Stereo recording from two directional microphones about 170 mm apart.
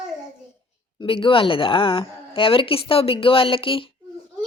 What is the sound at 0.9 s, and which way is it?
A woman's voice, 30° left (ahead or behind).